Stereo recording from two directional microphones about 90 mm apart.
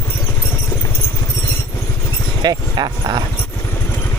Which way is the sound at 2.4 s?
50° right (ahead or behind).